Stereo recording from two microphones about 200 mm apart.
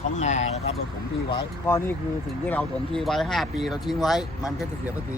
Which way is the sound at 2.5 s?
5° left (ahead or behind).